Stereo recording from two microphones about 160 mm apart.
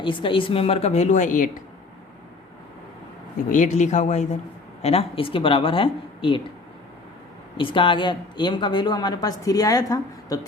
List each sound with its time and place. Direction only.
0.0 s a woman's voice: 30° left (ahead or behind); by 1.6 s 55° left (ahead or behind)
3.5 s a woman's voice: 50° left (ahead or behind); by 6.4 s 30° left (ahead or behind)
7.5 s a woman's voice: 30° left (ahead or behind)